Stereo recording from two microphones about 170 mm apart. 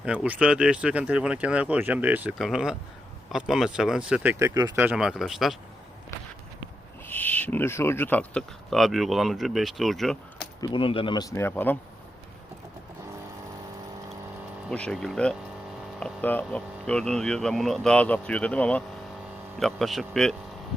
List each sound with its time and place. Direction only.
0.0 s speech: 5° right (ahead or behind)
4.8 s speech: 5° right (ahead or behind)
7.1 s speech: 10° left (ahead or behind)
10.6 s speech: 30° left (ahead or behind); by 11.8 s 10° left (ahead or behind)
14.7 s speech: 5° left (ahead or behind)